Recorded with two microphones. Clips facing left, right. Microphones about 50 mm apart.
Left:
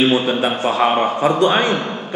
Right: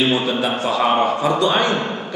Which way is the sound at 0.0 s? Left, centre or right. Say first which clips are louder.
Left 3 dB; left.